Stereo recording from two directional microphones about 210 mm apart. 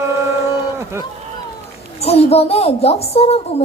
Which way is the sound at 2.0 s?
30° left (ahead or behind).